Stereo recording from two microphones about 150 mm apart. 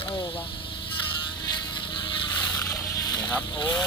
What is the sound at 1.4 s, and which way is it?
Boat, 30° left (ahead or behind).